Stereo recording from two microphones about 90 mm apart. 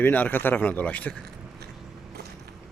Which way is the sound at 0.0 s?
20° left (ahead or behind).